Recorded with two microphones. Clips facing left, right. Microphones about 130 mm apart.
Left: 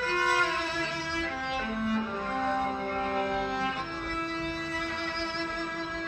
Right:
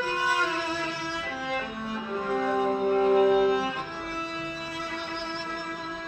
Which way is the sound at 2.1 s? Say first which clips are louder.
Right 4 dB; 10° right (ahead or behind).